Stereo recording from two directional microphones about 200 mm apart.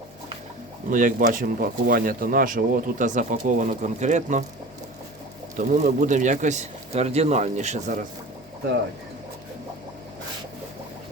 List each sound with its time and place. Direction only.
0.9 s speech: 40° right (ahead or behind)
5.5 s speech: 40° right (ahead or behind)